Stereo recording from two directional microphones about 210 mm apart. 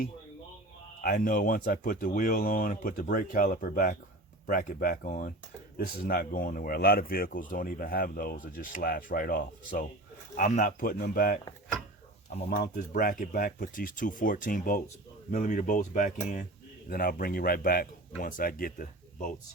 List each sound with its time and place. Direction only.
1.0 s speech: 40° left (ahead or behind)
12.5 s speech: 45° left (ahead or behind)